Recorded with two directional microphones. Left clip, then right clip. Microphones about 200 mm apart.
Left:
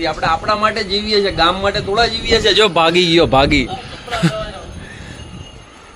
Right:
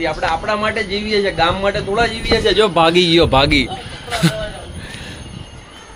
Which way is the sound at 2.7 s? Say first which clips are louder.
Even; 20° left (ahead or behind).